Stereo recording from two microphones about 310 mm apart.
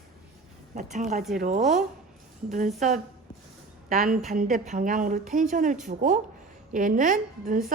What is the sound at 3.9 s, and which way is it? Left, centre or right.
A woman's voice, right.